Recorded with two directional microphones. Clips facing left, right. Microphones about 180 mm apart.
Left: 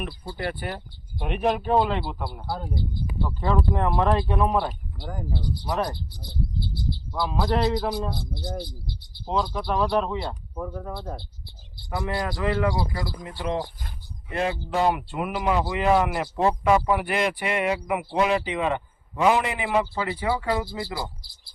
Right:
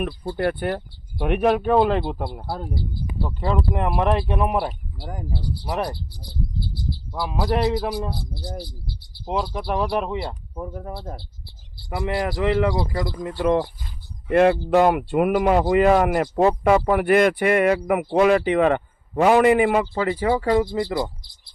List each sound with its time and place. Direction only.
0.0 s speech: 45° right (ahead or behind)
1.3 s speech: 60° right (ahead or behind)
2.0 s speech: 25° right (ahead or behind); by 5.9 s 10° right (ahead or behind)
7.2 s speech: 10° right (ahead or behind)
12.0 s speech: 20° right (ahead or behind)
13.4 s speech: 55° right (ahead or behind)
14.3 s speech: 65° right (ahead or behind); by 20.5 s 45° right (ahead or behind)